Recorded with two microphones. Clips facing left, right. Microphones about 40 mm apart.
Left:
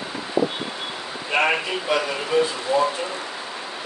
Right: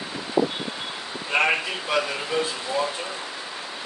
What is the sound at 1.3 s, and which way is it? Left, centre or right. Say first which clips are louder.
Speech: left 1 dB; centre.